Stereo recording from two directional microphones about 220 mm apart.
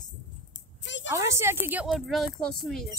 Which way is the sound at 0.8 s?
55° left (ahead or behind).